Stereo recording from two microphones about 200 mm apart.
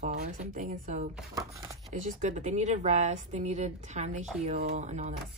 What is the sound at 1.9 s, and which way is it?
A woman's voice, 35° right (ahead or behind).